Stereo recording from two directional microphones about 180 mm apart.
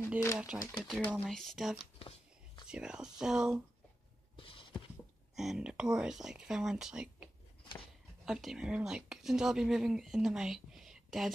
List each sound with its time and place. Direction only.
0.4 s speech: 5° right (ahead or behind)
2.0 s a sound: 35° left (ahead or behind)
2.7 s speech: 5° right (ahead or behind)
4.4 s a sound: 30° left (ahead or behind)
5.3 s speech: centre (ahead or behind)
8.3 s speech: centre (ahead or behind)